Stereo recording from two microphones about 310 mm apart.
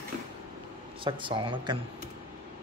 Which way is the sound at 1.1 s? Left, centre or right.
Centre.